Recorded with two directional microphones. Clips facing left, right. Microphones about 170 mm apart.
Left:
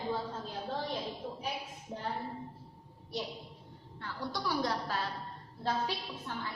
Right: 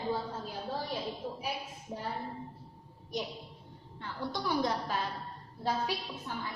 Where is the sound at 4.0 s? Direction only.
20° right (ahead or behind).